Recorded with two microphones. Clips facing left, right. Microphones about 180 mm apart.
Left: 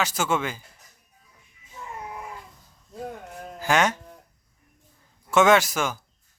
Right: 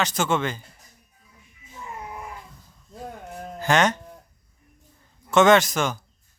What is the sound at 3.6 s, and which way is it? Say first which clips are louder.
Speech: right 2 dB; 5° left (ahead or behind).